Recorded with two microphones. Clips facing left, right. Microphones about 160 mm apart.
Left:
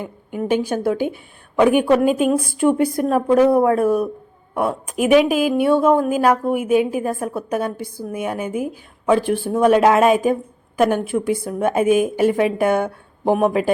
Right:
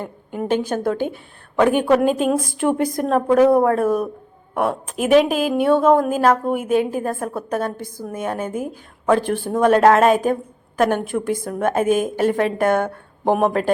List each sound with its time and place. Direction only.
0.3 s a woman's voice: 10° left (ahead or behind)
2.4 s speech: 45° right (ahead or behind)
2.7 s a woman's voice: 10° left (ahead or behind)
3.8 s speech: 40° right (ahead or behind)
4.9 s a woman's voice: 10° left (ahead or behind)
5.3 s speech: 45° right (ahead or behind)
5.7 s a woman's voice: 10° left (ahead or behind)